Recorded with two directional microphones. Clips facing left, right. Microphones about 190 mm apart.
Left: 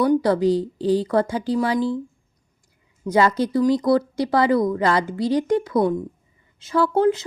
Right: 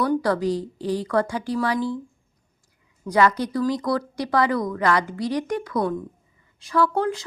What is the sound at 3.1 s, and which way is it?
A woman's voice, 25° left (ahead or behind).